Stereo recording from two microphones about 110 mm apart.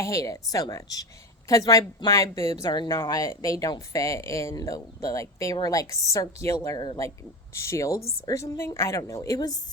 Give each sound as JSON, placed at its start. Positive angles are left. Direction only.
{"t": 0.0, "sound": "a woman's voice", "side_deg": 30}
{"t": 2.6, "sound": "speech", "side_deg": 45}
{"t": 2.9, "sound": "a woman's voice", "side_deg": 30}
{"t": 6.7, "sound": "a woman's voice", "side_deg": 40}
{"t": 7.5, "sound": "a woman's voice", "side_deg": 25}